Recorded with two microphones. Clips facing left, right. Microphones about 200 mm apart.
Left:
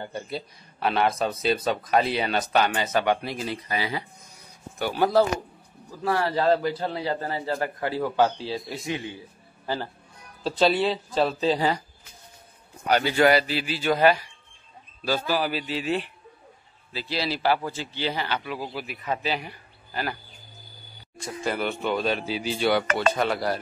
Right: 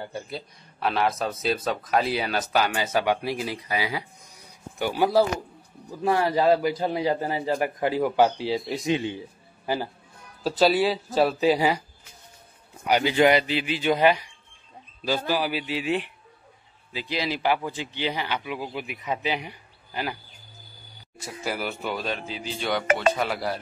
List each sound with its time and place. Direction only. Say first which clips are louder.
0.0 s a man's voice: left 1 dB; centre (ahead or behind)
12.8 s a man's voice: even; 15° right (ahead or behind)
21.2 s speech: left 3 dB; 5° right (ahead or behind)